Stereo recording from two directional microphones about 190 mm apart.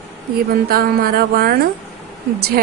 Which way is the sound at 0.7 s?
50° right (ahead or behind).